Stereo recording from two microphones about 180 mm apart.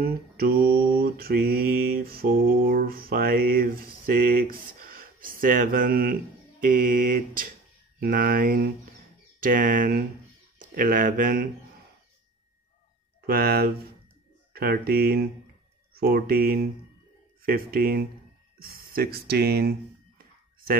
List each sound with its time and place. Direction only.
0.0 s mantra: 60° right (ahead or behind)
6.6 s a sound: 50° right (ahead or behind)
8.0 s speech: 55° right (ahead or behind)
9.4 s a sound: 50° right (ahead or behind)
10.6 s speech: 50° right (ahead or behind)
13.3 s speech: 60° right (ahead or behind)